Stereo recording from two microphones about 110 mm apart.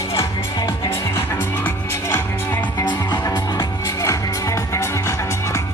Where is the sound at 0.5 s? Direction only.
35° left (ahead or behind).